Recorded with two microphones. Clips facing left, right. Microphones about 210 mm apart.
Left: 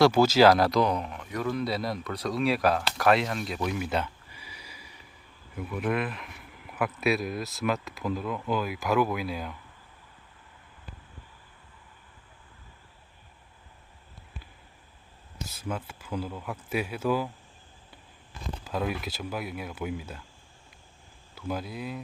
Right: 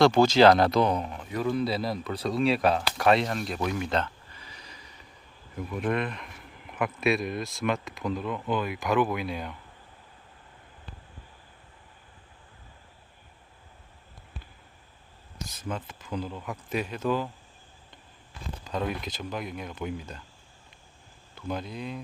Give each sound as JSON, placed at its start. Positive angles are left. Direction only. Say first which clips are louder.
{"t": 0.0, "sound": "speech", "louder": "right 1 dB", "side_deg": 5}
{"t": 1.1, "sound": "speech", "louder": "right 1 dB", "side_deg": -30}
{"t": 1.4, "sound": "speech", "louder": "right 2 dB", "side_deg": 0}
{"t": 15.4, "sound": "speech", "louder": "even", "side_deg": 5}
{"t": 18.6, "sound": "speech", "louder": "even", "side_deg": 5}
{"t": 21.3, "sound": "speech", "louder": "even", "side_deg": 5}